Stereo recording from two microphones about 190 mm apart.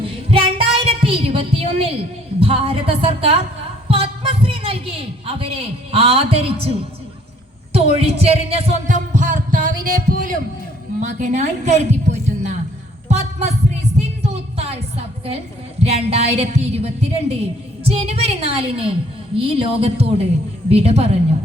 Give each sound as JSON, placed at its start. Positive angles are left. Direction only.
{"t": 0.0, "sound": "child singing", "side_deg": -30}
{"t": 2.4, "sound": "a woman's voice", "side_deg": -30}
{"t": 11.0, "sound": "a woman's voice", "side_deg": -40}
{"t": 14.2, "sound": "music", "side_deg": -30}
{"t": 15.8, "sound": "a woman's voice", "side_deg": -35}